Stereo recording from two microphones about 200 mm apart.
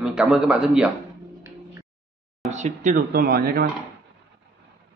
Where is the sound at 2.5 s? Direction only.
35° right (ahead or behind).